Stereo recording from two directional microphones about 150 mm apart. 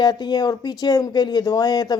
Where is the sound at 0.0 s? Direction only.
25° left (ahead or behind).